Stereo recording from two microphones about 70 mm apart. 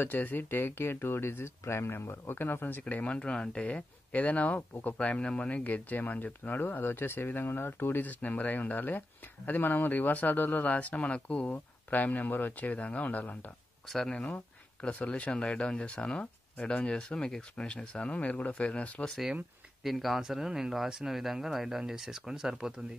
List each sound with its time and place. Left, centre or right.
0.0 s speech: left
13.8 s speech: centre
14.8 s speech: centre
19.8 s speech: centre